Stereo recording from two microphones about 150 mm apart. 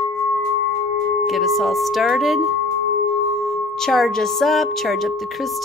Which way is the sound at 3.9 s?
Centre (ahead or behind).